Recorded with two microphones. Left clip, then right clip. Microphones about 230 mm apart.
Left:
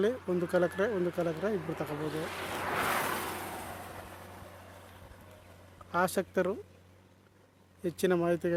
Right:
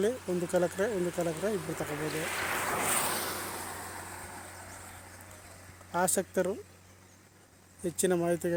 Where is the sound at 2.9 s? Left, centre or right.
Left.